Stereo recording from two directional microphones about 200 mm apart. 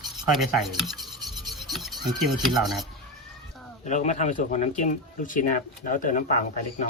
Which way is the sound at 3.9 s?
35° left (ahead or behind).